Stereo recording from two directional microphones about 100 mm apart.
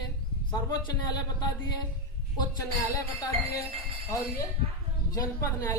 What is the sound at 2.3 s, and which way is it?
Speech, 35° left (ahead or behind).